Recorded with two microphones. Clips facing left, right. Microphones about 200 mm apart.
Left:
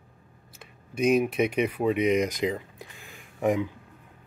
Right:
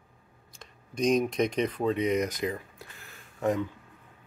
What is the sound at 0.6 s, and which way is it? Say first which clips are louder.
Speech: left 2 dB; 5° left (ahead or behind).